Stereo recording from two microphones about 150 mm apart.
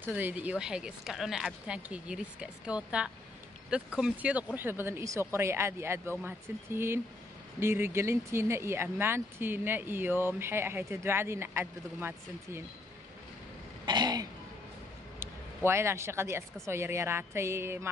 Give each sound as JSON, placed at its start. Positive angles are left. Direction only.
{"t": 0.0, "sound": "speech", "side_deg": -10}
{"t": 13.8, "sound": "speech", "side_deg": -30}
{"t": 15.1, "sound": "speech", "side_deg": -15}